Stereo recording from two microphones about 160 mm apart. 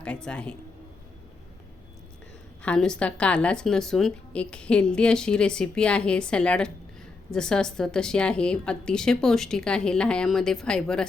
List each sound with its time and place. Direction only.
0.0 s speech: 5° left (ahead or behind)
2.6 s a woman's voice: 5° left (ahead or behind)